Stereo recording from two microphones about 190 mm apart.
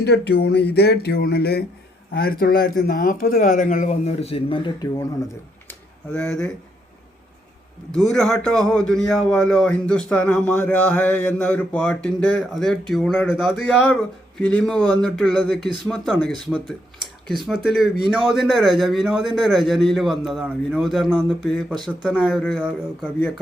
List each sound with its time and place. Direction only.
0.0 s a man's voice: 60° left (ahead or behind); by 4.9 s 25° left (ahead or behind)
8.1 s a man's voice: 5° left (ahead or behind)